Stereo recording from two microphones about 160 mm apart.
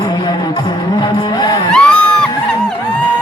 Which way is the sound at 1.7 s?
5° left (ahead or behind).